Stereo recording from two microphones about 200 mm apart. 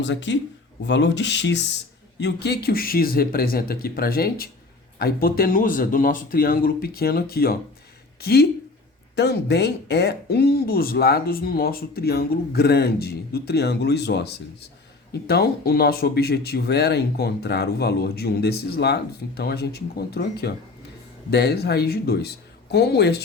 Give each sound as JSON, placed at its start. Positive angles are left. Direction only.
{"t": 0.0, "sound": "speech", "side_deg": 65}
{"t": 15.3, "sound": "speech", "side_deg": 50}